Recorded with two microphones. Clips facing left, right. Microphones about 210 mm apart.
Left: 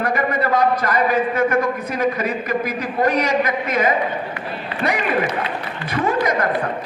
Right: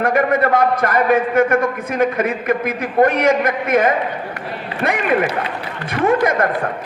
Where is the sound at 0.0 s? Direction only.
50° right (ahead or behind).